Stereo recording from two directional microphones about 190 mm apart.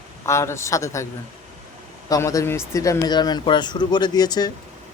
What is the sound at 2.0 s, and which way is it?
Speech, 15° left (ahead or behind).